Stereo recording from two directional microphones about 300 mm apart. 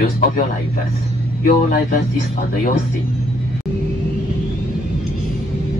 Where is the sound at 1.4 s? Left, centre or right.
Left.